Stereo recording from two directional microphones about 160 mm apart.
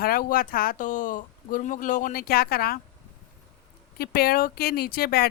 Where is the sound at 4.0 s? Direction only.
75° left (ahead or behind).